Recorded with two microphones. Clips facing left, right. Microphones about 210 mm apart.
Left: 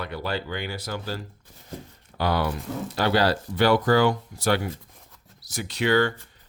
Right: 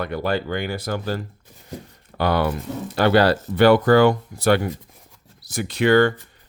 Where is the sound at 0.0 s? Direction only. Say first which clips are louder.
Right 6 dB; 50° right (ahead or behind).